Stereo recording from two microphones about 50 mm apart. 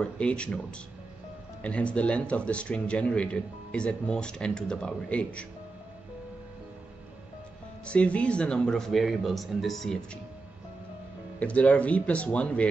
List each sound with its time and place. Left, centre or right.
0.0 s speech: left
7.8 s speech: left; by 9.9 s centre
11.3 s speech: left